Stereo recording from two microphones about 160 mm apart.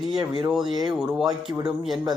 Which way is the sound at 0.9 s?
5° right (ahead or behind).